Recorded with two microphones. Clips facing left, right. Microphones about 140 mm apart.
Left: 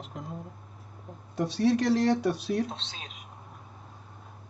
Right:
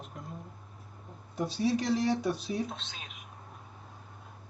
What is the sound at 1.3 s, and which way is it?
Speech, 75° left (ahead or behind).